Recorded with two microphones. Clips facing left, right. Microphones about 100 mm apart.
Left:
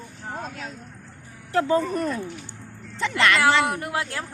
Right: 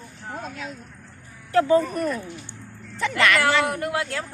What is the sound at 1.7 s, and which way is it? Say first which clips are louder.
Speech: right 2 dB; 35° left (ahead or behind).